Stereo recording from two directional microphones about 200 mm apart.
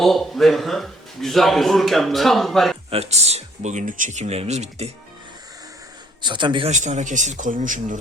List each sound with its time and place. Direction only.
0.0 s a man's voice: centre (ahead or behind)
2.9 s speech: 30° right (ahead or behind)
6.2 s a man's voice: 25° right (ahead or behind)
6.7 s speech: 35° right (ahead or behind)